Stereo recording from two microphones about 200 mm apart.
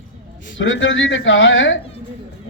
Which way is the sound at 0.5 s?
70° left (ahead or behind).